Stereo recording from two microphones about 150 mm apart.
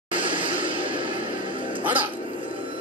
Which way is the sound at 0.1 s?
35° right (ahead or behind).